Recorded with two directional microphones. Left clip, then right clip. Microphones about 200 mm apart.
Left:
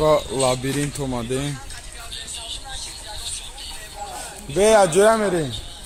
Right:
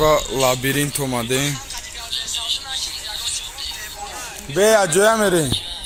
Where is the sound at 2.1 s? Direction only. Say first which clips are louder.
Right 10 dB; 40° left (ahead or behind).